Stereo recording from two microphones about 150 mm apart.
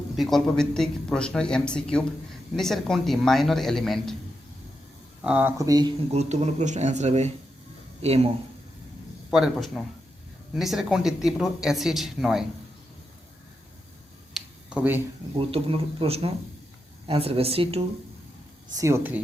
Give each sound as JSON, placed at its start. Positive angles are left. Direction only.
{"t": 0.2, "sound": "speech", "side_deg": 0}
{"t": 5.2, "sound": "speech", "side_deg": -10}
{"t": 5.5, "sound": "speech", "side_deg": -25}
{"t": 6.1, "sound": "speech", "side_deg": -45}
{"t": 9.3, "sound": "speech", "side_deg": 0}
{"t": 14.3, "sound": "finger snapping", "side_deg": -5}
{"t": 15.4, "sound": "speech", "side_deg": -40}
{"t": 18.8, "sound": "speech", "side_deg": -15}